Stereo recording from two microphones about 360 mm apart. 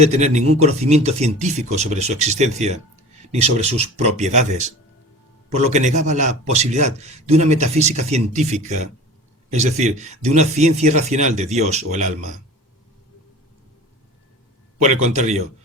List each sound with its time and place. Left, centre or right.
0.0 s a man's voice: centre
15.1 s a man's voice: centre